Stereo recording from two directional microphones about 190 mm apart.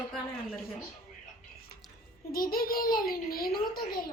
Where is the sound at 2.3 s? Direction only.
50° left (ahead or behind).